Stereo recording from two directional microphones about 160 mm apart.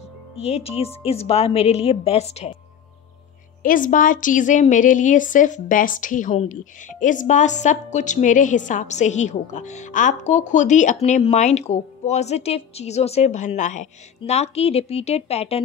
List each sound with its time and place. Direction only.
0.4 s a woman's voice: 40° left (ahead or behind)
3.6 s a woman's voice: 55° left (ahead or behind); by 15.6 s 40° left (ahead or behind)